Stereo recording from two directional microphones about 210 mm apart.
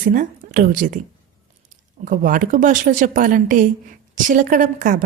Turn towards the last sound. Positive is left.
turn(degrees=-40)  # may be behind; listen again after turning